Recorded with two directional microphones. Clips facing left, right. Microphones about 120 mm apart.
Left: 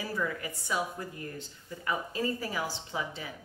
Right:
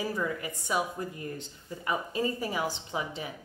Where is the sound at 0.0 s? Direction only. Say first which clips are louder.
Right 2 dB; 20° right (ahead or behind).